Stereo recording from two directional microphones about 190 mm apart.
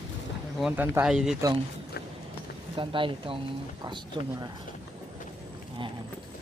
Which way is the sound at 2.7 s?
25° right (ahead or behind).